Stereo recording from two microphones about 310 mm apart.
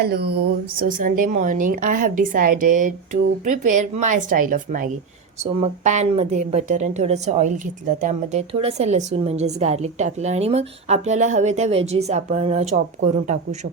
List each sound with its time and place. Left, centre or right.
0.0 s a woman's voice: right